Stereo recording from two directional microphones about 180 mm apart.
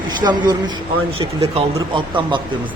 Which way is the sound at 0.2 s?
25° right (ahead or behind).